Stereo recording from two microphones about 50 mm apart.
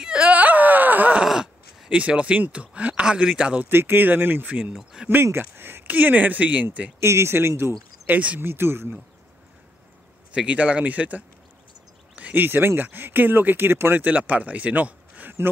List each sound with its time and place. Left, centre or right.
0.2 s wail: right
1.2 s groan: centre
1.9 s speech: right
3.6 s speech: right
5.0 s speech: centre
5.4 s speech: right
7.0 s speech: right
8.1 s speech: right
8.4 s speech: right
10.3 s speech: right
12.2 s a sound: right
12.4 s speech: right
13.9 s a man's voice: right